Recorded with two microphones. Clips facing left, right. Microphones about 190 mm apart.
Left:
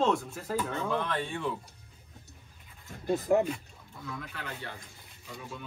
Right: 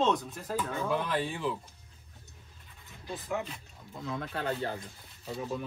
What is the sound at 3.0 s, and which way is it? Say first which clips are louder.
Speech: left 10 dB; 45° left (ahead or behind).